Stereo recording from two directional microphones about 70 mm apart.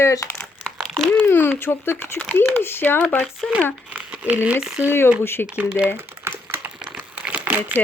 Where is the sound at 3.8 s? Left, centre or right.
Right.